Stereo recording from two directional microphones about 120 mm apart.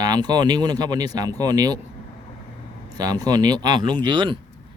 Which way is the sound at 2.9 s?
30° right (ahead or behind).